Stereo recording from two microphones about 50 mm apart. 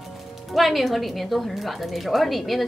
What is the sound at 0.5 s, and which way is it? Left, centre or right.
A woman's voice, centre.